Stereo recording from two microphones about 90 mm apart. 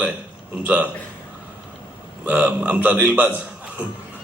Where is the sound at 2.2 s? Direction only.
20° right (ahead or behind).